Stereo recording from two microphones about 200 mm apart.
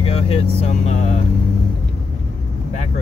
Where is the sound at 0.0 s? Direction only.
30° left (ahead or behind).